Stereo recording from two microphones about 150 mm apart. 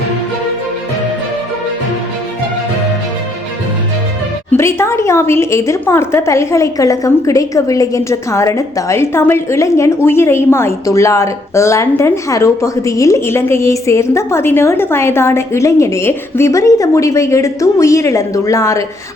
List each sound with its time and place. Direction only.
4.5 s a woman's voice: 15° left (ahead or behind)